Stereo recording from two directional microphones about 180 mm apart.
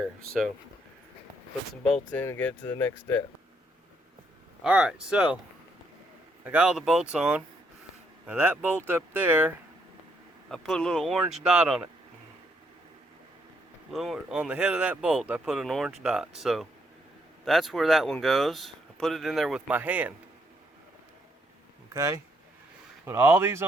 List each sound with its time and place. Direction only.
1.8 s speech: 10° left (ahead or behind)
4.6 s speech: 5° right (ahead or behind)
6.4 s speech: 5° right (ahead or behind)
10.5 s speech: centre (ahead or behind)
13.9 s speech: centre (ahead or behind)
21.9 s speech: 15° right (ahead or behind)